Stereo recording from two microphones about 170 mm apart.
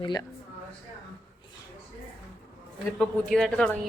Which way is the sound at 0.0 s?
20° left (ahead or behind).